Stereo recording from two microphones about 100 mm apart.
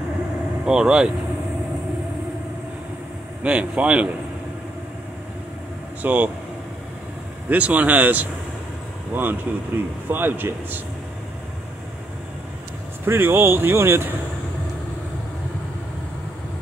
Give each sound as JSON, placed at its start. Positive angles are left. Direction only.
{"t": 0.7, "sound": "speech", "side_deg": -10}
{"t": 3.4, "sound": "speech", "side_deg": -10}
{"t": 6.0, "sound": "speech", "side_deg": -15}
{"t": 7.4, "sound": "speech", "side_deg": -15}
{"t": 13.0, "sound": "speech", "side_deg": -25}